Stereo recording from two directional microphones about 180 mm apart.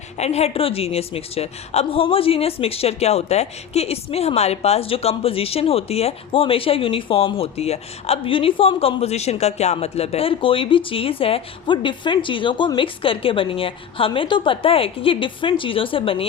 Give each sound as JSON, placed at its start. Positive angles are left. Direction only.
{"t": 0.2, "sound": "a woman's voice", "side_deg": 35}